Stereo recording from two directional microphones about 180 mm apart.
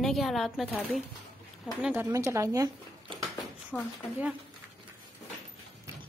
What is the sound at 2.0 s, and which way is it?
Speech, 15° right (ahead or behind).